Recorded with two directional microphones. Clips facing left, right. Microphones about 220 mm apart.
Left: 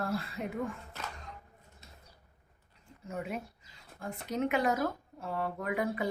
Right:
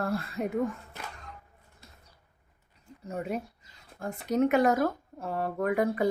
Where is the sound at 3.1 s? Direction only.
40° right (ahead or behind).